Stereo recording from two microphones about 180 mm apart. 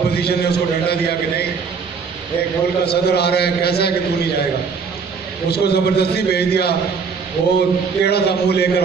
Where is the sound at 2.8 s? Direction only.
65° left (ahead or behind).